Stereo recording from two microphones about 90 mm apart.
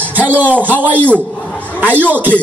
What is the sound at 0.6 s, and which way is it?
Beatboxing, 20° right (ahead or behind).